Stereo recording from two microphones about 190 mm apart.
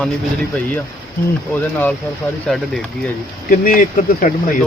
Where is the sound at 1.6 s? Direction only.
10° left (ahead or behind).